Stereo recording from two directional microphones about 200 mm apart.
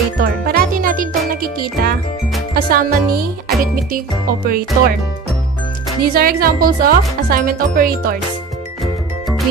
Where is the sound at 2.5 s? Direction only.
45° right (ahead or behind).